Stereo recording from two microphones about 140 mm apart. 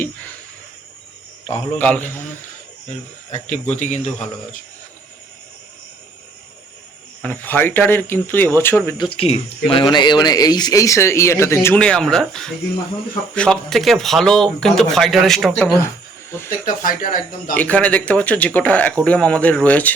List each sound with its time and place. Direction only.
1.5 s speech: 10° left (ahead or behind)
3.3 s speech: 55° left (ahead or behind)
7.2 s speech: 15° left (ahead or behind)
9.0 s speech: 40° left (ahead or behind); by 11.8 s 20° left (ahead or behind)
11.8 s speech: 5° left (ahead or behind)
16.5 s speech: 75° left (ahead or behind)
17.5 s speech: 10° left (ahead or behind)